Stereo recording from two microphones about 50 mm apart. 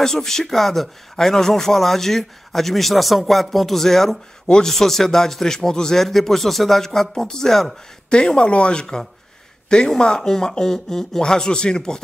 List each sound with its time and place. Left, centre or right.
0.0 s a man's voice: centre
8.1 s speech: centre